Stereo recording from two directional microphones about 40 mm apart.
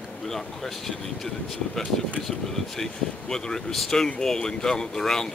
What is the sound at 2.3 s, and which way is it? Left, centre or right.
Speech, centre.